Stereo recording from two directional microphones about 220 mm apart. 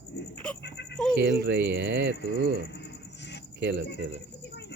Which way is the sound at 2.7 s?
50° left (ahead or behind).